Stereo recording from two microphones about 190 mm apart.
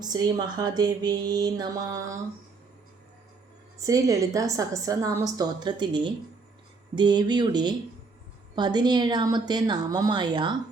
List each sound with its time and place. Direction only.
0.0 s speech: 20° right (ahead or behind)
3.8 s a woman's voice: 20° right (ahead or behind)